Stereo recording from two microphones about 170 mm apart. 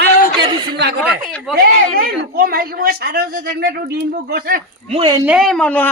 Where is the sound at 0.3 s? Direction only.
25° right (ahead or behind).